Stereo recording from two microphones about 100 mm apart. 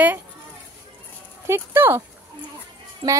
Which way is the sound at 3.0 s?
45° right (ahead or behind).